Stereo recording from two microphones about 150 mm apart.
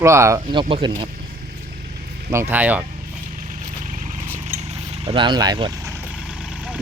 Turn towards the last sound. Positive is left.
turn(degrees=-30)  # may be behind; listen again after turning